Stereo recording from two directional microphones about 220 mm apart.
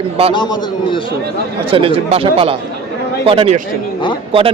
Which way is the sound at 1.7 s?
25° right (ahead or behind).